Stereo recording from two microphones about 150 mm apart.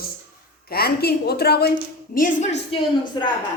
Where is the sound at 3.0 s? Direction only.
30° left (ahead or behind).